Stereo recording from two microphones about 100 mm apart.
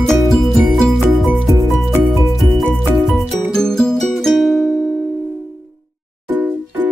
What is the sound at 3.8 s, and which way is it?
Music, 5° left (ahead or behind).